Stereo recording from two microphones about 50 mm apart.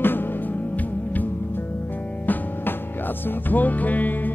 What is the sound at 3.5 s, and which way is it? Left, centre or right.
Music, left.